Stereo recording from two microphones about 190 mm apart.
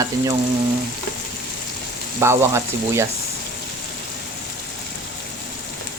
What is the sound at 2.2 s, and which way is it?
Frying, 15° right (ahead or behind).